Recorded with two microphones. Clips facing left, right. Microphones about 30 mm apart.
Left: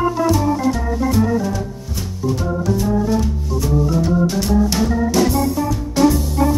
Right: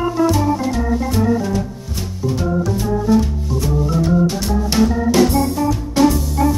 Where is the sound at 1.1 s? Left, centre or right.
Centre.